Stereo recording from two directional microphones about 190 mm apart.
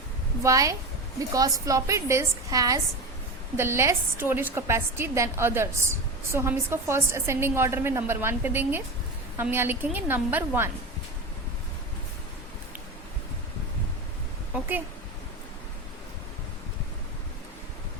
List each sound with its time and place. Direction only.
0.4 s a woman's voice: 15° right (ahead or behind)